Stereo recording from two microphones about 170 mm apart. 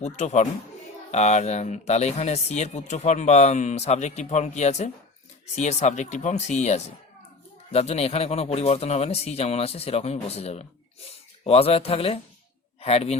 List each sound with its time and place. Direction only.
0.0 s speech: 40° left (ahead or behind)